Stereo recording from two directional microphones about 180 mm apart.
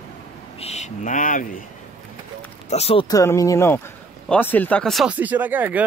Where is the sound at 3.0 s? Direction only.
20° left (ahead or behind).